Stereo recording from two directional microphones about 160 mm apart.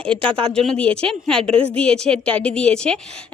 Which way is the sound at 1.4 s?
35° right (ahead or behind).